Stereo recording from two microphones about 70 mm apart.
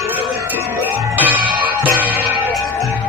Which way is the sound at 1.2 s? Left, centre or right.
Right.